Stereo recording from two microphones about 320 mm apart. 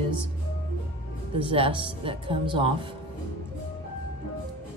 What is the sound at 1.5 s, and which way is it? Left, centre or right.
Speech, centre.